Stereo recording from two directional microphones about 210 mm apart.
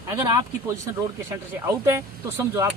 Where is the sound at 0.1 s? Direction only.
15° right (ahead or behind).